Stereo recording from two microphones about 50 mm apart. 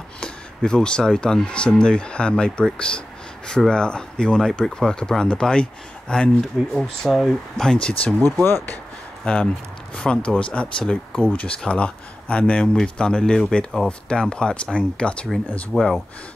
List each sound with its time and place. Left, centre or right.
0.2 s speech: centre
8.5 s speech: left
9.2 s speech: centre
15.7 s speech: centre